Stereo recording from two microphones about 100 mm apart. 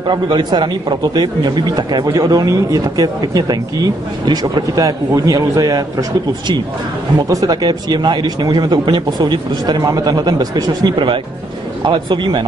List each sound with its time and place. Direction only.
0.0 s a man's voice: 50° right (ahead or behind)